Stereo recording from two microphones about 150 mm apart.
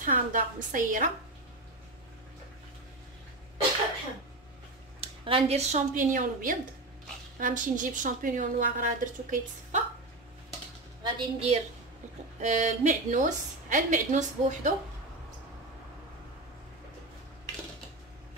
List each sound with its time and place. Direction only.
0.0 s a woman's voice: 60° right (ahead or behind)
5.0 s a woman's voice: 40° right (ahead or behind); by 9.8 s 60° right (ahead or behind)
11.0 s a woman's voice: 45° right (ahead or behind)
12.4 s a woman's voice: 55° right (ahead or behind)